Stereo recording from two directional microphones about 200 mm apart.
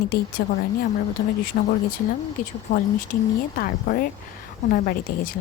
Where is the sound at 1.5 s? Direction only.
45° left (ahead or behind).